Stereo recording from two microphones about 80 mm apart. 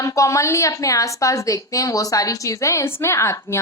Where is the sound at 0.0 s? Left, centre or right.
Left.